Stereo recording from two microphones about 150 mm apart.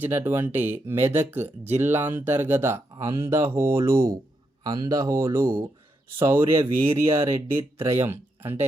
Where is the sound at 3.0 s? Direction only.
40° right (ahead or behind).